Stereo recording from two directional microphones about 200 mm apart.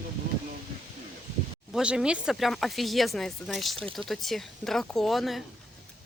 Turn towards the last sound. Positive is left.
turn(degrees=0)  # may be behind; listen again after turning